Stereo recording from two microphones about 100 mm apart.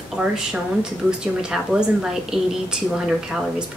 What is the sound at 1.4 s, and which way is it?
Speech, 5° right (ahead or behind).